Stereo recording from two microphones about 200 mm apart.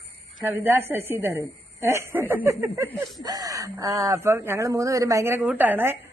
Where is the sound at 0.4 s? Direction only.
10° right (ahead or behind).